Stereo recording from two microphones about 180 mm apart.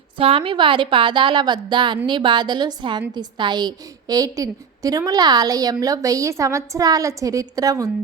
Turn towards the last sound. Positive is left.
turn(degrees=-20)  # may be behind; listen again after turning